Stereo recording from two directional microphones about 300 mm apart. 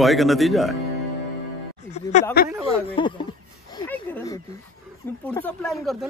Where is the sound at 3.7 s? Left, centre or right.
Centre.